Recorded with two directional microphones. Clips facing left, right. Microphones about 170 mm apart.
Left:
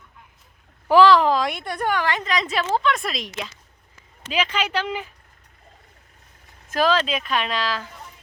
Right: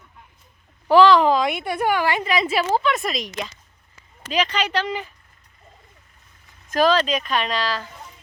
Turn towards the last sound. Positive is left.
turn(degrees=5)  # may be behind; listen again after turning